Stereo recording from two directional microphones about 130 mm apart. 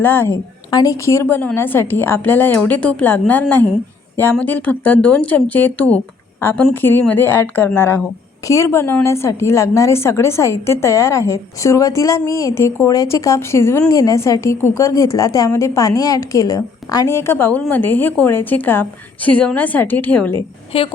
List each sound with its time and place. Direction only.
0.0 s a woman's voice: 15° left (ahead or behind)
0.7 s a woman's voice: 30° left (ahead or behind); by 20.4 s 10° left (ahead or behind)
20.7 s a woman's voice: 45° left (ahead or behind)